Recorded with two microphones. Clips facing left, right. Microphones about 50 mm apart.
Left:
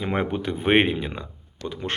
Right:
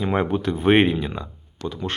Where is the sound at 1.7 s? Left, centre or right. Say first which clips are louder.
Right 1 dB; left.